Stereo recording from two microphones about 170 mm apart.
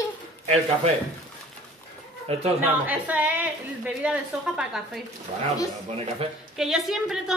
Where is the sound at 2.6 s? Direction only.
10° right (ahead or behind).